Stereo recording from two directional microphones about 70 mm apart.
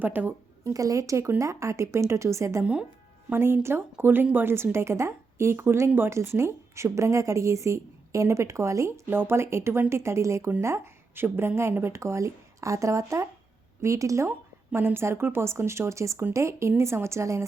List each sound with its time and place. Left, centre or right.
0.0 s a woman's voice: right
0.6 s speech: right
9.0 s speech: right
14.3 s speech: right